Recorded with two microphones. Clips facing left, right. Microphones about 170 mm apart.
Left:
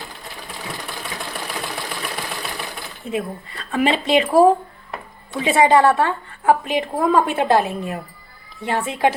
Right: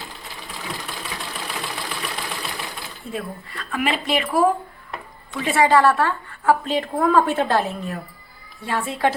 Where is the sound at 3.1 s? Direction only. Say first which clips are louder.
Left 5 dB; 20° left (ahead or behind).